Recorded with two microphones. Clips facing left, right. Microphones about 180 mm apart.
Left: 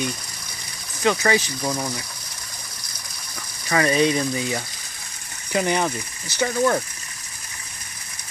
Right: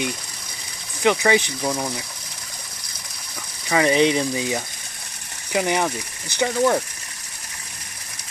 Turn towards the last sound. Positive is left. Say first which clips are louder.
# right 1 dB
turn(degrees=-10)  # may be behind; listen again after turning